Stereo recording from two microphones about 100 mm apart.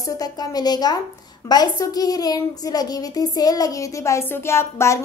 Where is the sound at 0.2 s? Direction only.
40° left (ahead or behind).